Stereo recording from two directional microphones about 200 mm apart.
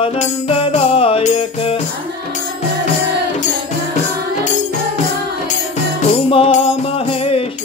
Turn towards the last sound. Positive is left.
turn(degrees=30)  # may be behind; listen again after turning